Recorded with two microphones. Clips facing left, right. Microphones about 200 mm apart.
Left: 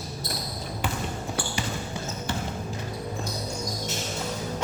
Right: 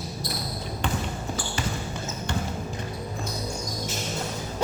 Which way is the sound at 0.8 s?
5° left (ahead or behind).